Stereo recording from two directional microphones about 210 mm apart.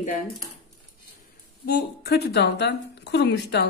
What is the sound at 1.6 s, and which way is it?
A woman's voice, 50° left (ahead or behind).